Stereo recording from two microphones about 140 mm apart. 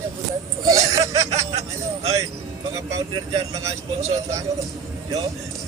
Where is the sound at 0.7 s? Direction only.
25° right (ahead or behind).